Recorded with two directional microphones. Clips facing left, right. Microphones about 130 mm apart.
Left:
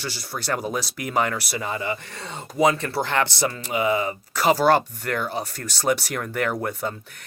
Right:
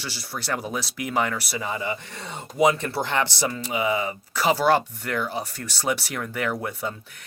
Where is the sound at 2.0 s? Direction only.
15° right (ahead or behind).